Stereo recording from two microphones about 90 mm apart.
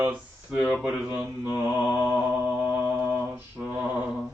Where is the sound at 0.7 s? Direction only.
5° right (ahead or behind).